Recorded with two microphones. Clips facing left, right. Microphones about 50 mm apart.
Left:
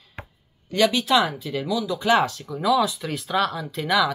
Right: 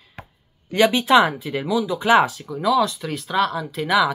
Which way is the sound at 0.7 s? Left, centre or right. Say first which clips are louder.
Right 4 dB; right.